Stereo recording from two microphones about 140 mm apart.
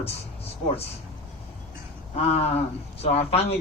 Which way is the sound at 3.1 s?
45° left (ahead or behind).